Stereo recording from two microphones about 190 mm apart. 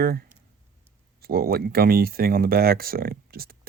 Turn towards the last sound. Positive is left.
turn(degrees=-50)  # may be behind; listen again after turning